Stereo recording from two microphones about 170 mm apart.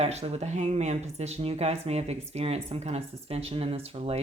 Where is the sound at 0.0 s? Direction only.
40° right (ahead or behind).